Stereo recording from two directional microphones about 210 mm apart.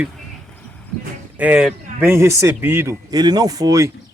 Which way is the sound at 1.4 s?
5° right (ahead or behind).